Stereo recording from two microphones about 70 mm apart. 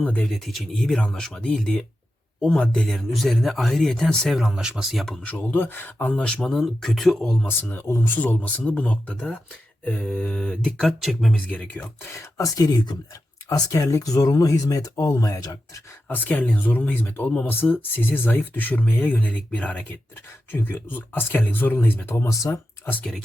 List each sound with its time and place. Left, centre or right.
0.0 s speech: centre
0.3 s speech: centre
4.4 s speech: centre
5.2 s speech: left
6.1 s speech: centre
7.4 s speech: left; by 11.3 s centre
11.3 s speech: left
12.4 s speech: left
13.6 s speech: left
16.0 s speech: left
20.5 s speech: left
22.1 s speech: left
22.8 s speech: left